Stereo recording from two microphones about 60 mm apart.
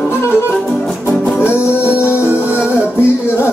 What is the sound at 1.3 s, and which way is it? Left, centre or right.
Music, left.